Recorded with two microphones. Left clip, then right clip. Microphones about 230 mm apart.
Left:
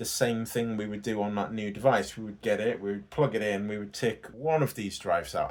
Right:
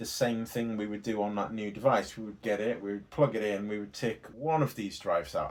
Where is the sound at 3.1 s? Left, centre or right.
Left.